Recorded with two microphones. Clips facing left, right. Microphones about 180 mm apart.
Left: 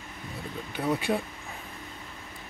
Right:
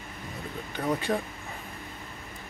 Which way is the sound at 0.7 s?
10° left (ahead or behind).